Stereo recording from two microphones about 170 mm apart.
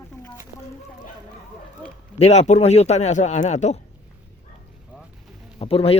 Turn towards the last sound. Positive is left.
turn(degrees=35)  # may be behind; listen again after turning